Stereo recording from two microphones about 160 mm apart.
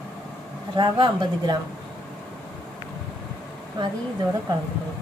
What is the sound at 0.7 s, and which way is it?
Speech, 30° right (ahead or behind).